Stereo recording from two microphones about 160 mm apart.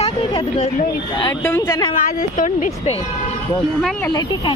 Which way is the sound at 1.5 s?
20° left (ahead or behind).